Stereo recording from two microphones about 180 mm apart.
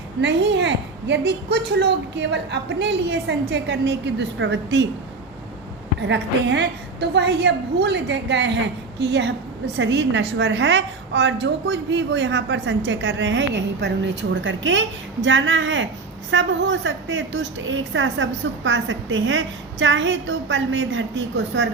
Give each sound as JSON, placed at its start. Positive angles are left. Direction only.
{"t": 0.2, "sound": "a woman's voice", "side_deg": -75}
{"t": 6.0, "sound": "a woman's voice", "side_deg": -75}